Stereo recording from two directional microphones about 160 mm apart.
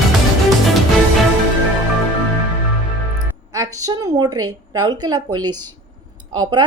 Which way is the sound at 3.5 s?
20° right (ahead or behind).